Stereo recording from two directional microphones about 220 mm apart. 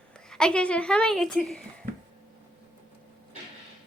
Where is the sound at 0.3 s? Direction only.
5° left (ahead or behind).